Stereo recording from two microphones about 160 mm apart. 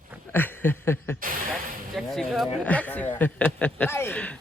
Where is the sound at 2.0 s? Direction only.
Centre (ahead or behind).